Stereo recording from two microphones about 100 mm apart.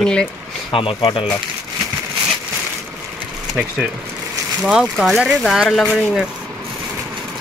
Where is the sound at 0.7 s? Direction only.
65° left (ahead or behind).